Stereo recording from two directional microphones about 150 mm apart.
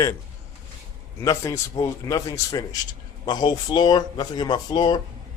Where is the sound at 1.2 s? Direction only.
20° left (ahead or behind).